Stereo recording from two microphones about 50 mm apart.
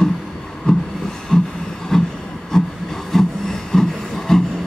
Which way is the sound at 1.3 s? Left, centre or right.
Centre.